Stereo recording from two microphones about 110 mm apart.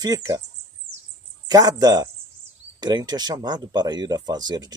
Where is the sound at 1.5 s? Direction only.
35° right (ahead or behind).